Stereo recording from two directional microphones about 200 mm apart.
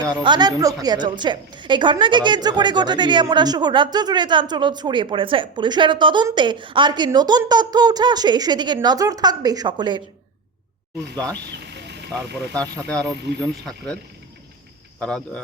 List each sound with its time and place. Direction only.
0.3 s a woman's voice: 20° right (ahead or behind)
11.4 s vehicle: 55° right (ahead or behind)
13.1 s speech: 55° right (ahead or behind)
13.4 s speech: 5° left (ahead or behind)